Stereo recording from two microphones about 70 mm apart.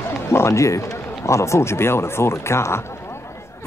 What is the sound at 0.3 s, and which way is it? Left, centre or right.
Speech, left.